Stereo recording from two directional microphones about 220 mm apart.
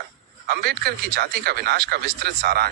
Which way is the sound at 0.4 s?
45° right (ahead or behind).